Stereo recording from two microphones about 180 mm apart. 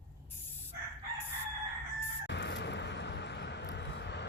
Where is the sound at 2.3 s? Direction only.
75° left (ahead or behind).